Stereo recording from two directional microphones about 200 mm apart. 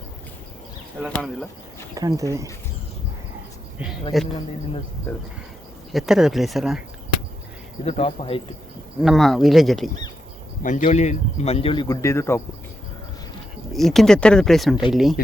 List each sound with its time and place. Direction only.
2.0 s speech: 15° right (ahead or behind)
4.1 s speech: centre (ahead or behind)
5.1 s speech: 10° left (ahead or behind)
5.9 s speech: centre (ahead or behind)
7.9 s a man's voice: 30° left (ahead or behind)
9.0 s speech: centre (ahead or behind)
10.6 s a man's voice: 40° left (ahead or behind); by 12.4 s 15° left (ahead or behind)
13.7 s speech: centre (ahead or behind)